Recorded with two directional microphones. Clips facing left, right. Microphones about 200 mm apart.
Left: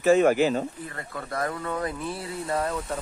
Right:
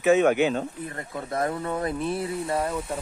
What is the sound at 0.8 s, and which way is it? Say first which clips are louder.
Speech: right 3 dB; 20° right (ahead or behind).